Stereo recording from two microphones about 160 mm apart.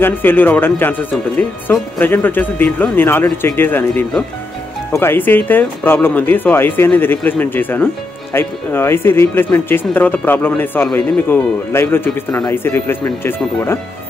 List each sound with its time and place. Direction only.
0.0 s speech: 10° left (ahead or behind)